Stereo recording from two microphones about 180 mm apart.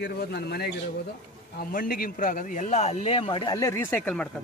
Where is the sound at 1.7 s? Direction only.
50° left (ahead or behind); by 4.3 s 5° left (ahead or behind).